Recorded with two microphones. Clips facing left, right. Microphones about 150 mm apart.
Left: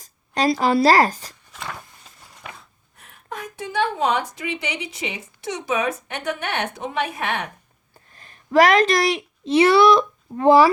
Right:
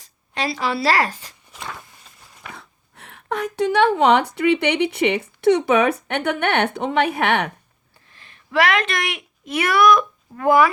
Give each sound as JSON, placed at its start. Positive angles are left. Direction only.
{"t": 0.0, "sound": "a woman's voice", "side_deg": 40}
{"t": 2.6, "sound": "speech", "side_deg": -75}
{"t": 8.1, "sound": "speech", "side_deg": 40}